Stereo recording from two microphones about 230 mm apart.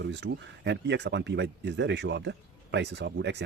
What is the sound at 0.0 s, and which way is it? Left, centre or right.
Speech, right.